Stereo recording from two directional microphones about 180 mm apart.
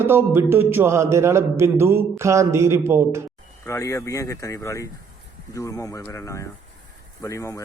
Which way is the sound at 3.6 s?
15° left (ahead or behind).